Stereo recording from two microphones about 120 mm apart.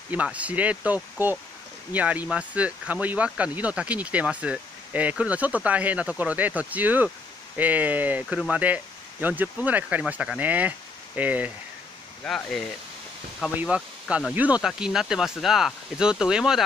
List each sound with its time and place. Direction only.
0.1 s speech: 10° right (ahead or behind)
12.4 s speech: 5° left (ahead or behind)
13.6 s speech: 10° right (ahead or behind)